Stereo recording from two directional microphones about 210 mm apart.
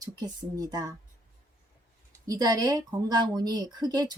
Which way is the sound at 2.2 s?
15° right (ahead or behind).